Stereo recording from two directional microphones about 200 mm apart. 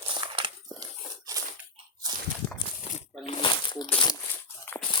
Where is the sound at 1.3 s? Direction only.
15° right (ahead or behind).